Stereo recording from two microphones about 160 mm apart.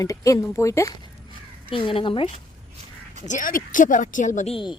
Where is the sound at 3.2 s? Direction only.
55° left (ahead or behind); by 4.7 s 40° left (ahead or behind).